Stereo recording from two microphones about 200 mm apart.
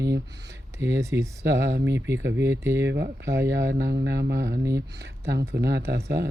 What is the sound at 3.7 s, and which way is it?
Speech, 50° right (ahead or behind).